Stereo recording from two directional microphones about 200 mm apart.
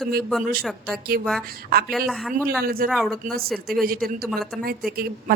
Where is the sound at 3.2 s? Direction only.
45° right (ahead or behind).